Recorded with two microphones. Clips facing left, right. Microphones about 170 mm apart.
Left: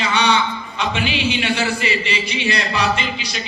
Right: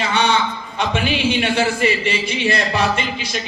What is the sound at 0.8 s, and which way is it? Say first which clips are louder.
A man's voice: right 2 dB; 50° right (ahead or behind).